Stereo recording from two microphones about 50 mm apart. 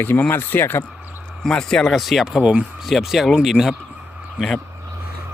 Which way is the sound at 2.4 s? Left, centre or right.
Right.